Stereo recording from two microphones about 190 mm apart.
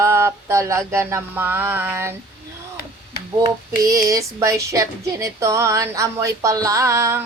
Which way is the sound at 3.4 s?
20° right (ahead or behind).